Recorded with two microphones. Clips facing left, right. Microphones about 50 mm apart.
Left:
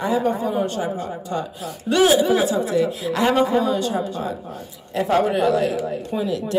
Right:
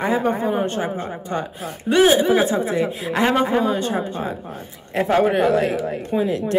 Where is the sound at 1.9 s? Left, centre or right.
Right.